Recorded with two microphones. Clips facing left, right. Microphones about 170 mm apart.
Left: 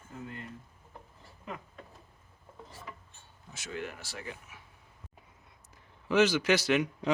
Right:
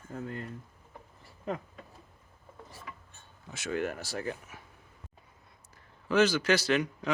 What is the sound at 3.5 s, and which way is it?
Speech, 60° right (ahead or behind).